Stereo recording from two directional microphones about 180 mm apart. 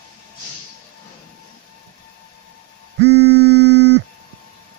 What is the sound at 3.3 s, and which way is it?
Music, 60° left (ahead or behind).